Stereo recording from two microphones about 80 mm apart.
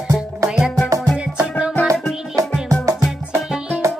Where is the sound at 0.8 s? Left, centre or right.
Right.